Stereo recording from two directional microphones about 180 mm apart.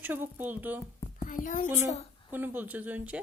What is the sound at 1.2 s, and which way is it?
Speech, 45° left (ahead or behind).